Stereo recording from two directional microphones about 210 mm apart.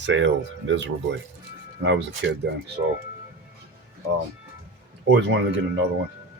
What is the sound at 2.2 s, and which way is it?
Speech, 60° right (ahead or behind).